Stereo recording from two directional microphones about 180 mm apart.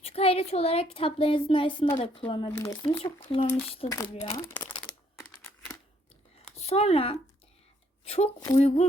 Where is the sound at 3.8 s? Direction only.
35° left (ahead or behind).